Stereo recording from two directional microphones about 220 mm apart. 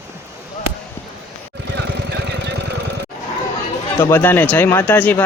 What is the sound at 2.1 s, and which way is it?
Vehicle, 50° right (ahead or behind).